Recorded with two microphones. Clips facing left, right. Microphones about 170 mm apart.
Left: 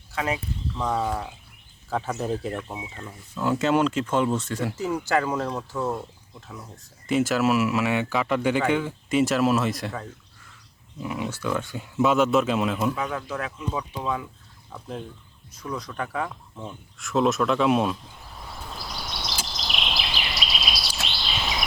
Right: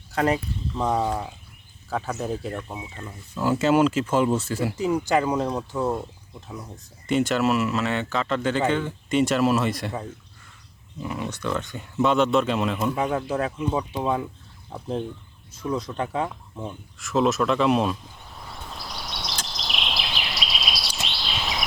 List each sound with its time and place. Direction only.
0.1 s speech: 40° right (ahead or behind)
0.8 s speech: 15° right (ahead or behind)
1.9 s speech: centre (ahead or behind); by 5.9 s 15° right (ahead or behind)
7.1 s speech: 5° left (ahead or behind)
11.0 s speech: 5° left (ahead or behind)
13.0 s speech: 30° right (ahead or behind)
17.0 s a sound: centre (ahead or behind)